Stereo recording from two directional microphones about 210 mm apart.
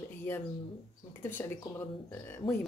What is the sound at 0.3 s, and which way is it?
Speech, 10° left (ahead or behind).